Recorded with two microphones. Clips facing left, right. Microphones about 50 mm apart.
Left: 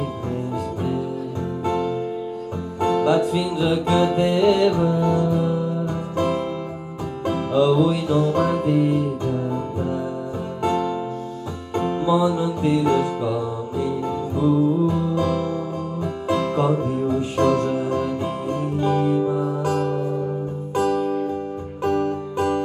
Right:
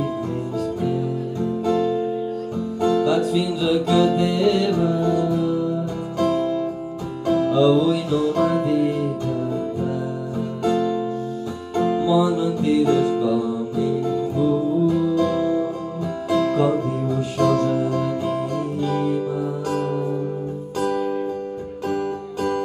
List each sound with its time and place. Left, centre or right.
1.6 s music: left
10.6 s music: left
21.8 s music: left